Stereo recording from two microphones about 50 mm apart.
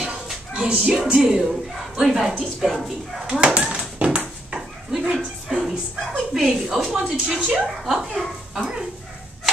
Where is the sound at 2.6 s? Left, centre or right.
Centre.